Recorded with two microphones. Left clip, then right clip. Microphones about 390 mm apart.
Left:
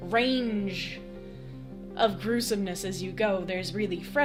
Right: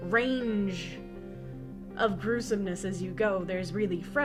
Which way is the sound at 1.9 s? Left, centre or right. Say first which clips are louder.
Left 2 dB; left.